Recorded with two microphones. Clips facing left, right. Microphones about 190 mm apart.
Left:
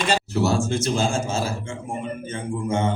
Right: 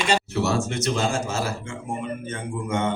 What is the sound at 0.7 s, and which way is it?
Speech, 30° left (ahead or behind).